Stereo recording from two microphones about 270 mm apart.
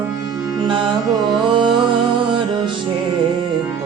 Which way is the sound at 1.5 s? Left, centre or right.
Centre.